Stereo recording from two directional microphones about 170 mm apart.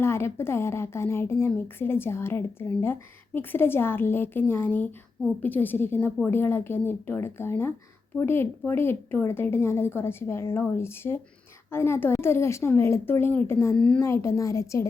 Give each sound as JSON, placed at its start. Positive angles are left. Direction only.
{"t": 0.0, "sound": "a woman's voice", "side_deg": 15}
{"t": 14.0, "sound": "a woman's voice", "side_deg": 15}